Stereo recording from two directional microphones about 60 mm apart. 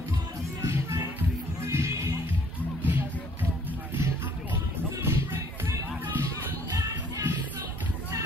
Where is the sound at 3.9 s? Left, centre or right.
Right.